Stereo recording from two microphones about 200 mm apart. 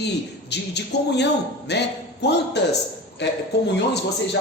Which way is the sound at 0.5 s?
60° left (ahead or behind).